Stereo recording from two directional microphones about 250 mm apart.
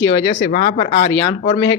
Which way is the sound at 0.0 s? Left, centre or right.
Left.